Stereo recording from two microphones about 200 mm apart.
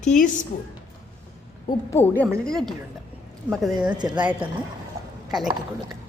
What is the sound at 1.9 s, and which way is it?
A woman's voice, 10° left (ahead or behind).